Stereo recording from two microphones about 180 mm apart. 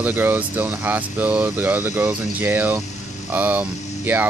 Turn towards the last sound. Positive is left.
turn(degrees=-10)  # may be behind; listen again after turning